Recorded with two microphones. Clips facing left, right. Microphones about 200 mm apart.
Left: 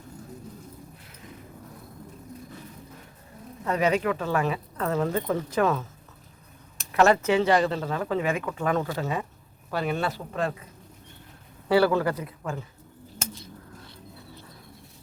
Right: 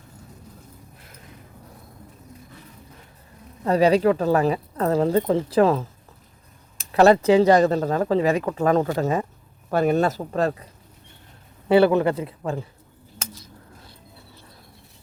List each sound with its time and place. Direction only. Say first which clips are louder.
3.6 s speech: right 7 dB; 35° right (ahead or behind)
6.9 s speech: right 6 dB; 35° right (ahead or behind)
11.7 s speech: right 5 dB; 20° right (ahead or behind)